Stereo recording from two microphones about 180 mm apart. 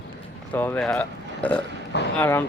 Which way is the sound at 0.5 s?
10° left (ahead or behind).